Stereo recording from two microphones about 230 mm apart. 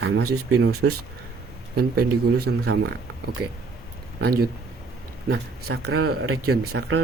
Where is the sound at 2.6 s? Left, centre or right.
Right.